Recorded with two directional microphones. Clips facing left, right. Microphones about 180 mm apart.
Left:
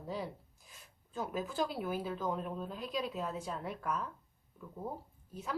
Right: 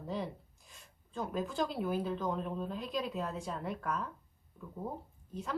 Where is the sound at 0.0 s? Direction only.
Centre (ahead or behind).